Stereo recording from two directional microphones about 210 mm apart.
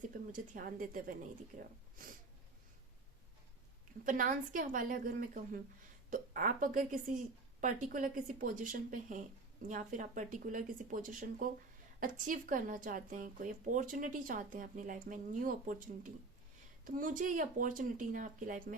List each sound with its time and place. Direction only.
0.1 s speech: 40° right (ahead or behind)
4.0 s speech: 40° right (ahead or behind)